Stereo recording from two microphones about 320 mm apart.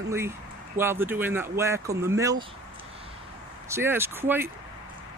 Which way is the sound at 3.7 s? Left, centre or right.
Centre.